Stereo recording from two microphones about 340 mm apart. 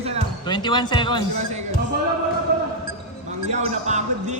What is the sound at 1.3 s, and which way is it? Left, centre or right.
Speech, centre.